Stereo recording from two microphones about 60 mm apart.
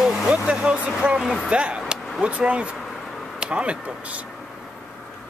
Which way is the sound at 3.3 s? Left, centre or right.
Centre.